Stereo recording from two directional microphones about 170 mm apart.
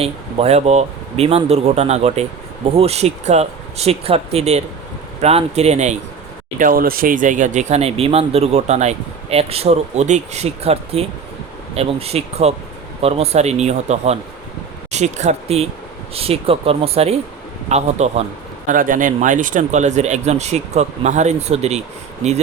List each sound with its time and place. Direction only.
0.0 s speech: 35° right (ahead or behind)
6.6 s speech: 60° right (ahead or behind); by 18.3 s 40° right (ahead or behind)
18.7 s speech: 50° right (ahead or behind)